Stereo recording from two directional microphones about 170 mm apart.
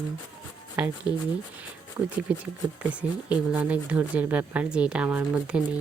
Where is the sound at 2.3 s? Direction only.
5° right (ahead or behind).